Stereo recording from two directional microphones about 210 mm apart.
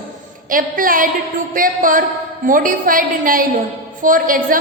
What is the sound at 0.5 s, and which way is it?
A woman's voice, 40° right (ahead or behind).